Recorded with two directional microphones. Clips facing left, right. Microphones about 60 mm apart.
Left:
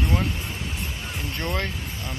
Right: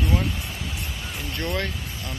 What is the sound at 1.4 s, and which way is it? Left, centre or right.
Speech, left.